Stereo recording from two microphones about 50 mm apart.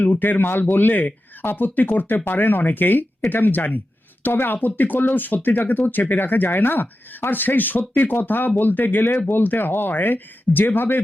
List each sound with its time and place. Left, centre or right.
0.0 s speech: left